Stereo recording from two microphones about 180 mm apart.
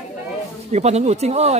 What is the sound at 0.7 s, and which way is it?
Speech, 40° right (ahead or behind).